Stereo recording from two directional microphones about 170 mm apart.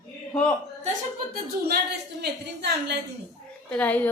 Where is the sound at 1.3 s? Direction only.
65° right (ahead or behind).